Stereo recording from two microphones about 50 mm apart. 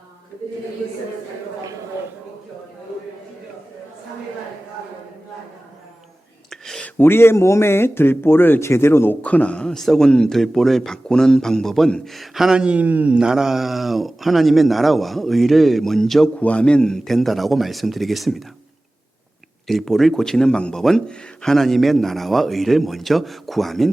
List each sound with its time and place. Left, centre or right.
7.0 s a man's voice: left
8.6 s speech: left
9.2 s speech: left
9.6 s a man's voice: centre
12.5 s speech: right
13.1 s speech: centre
16.4 s speech: left; by 18.4 s centre
19.6 s a man's voice: centre